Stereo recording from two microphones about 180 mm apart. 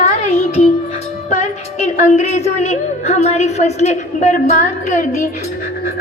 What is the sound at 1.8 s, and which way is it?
A woman's voice, 40° left (ahead or behind).